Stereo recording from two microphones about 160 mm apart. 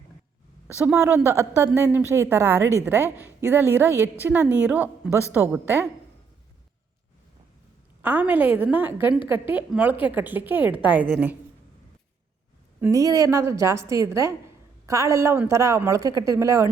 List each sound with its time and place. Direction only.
0.9 s a woman's voice: 15° right (ahead or behind)
8.0 s a woman's voice: 10° right (ahead or behind)
12.8 s a woman's voice: 20° right (ahead or behind)